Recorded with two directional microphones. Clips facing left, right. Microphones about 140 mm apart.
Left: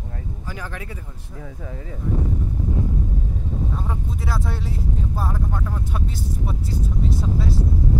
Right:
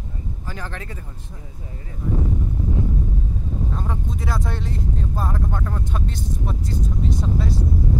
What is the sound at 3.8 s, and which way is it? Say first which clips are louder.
Speech: right 1 dB; 5° left (ahead or behind).